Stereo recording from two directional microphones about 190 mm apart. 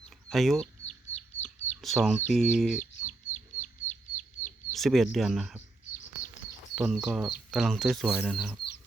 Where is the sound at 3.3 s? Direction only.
40° left (ahead or behind).